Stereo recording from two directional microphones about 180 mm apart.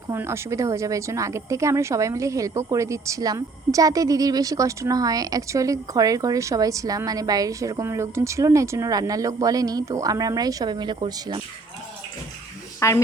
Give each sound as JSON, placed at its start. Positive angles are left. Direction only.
{"t": 0.1, "sound": "a woman's voice", "side_deg": -15}
{"t": 12.8, "sound": "a woman's voice", "side_deg": 15}